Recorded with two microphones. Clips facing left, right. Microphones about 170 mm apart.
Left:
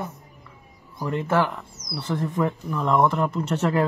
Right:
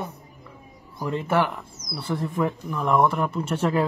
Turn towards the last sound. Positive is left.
turn(degrees=-10)  # may be behind; listen again after turning